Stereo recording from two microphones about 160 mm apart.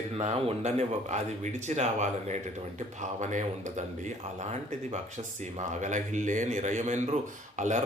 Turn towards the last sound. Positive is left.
turn(degrees=-50)  # may be behind; listen again after turning